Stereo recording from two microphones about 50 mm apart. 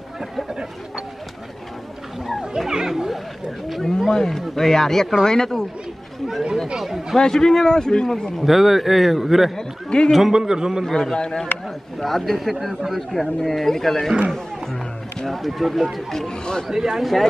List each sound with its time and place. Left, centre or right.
2.7 s a man's voice: centre
6.8 s speech: centre
7.2 s a man's voice: centre
8.4 s speech: centre
9.6 s a man's voice: centre
10.1 s speech: centre
10.8 s a man's voice: centre
12.0 s speech: centre
16.6 s speech: centre